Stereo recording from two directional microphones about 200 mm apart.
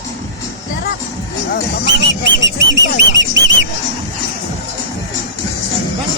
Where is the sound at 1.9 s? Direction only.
60° right (ahead or behind).